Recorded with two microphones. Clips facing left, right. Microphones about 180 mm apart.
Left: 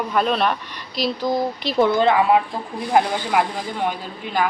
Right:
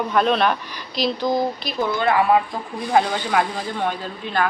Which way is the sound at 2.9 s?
10° left (ahead or behind).